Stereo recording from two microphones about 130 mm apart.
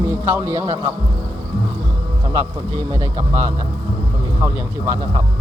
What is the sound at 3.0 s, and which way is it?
Speech, 25° right (ahead or behind).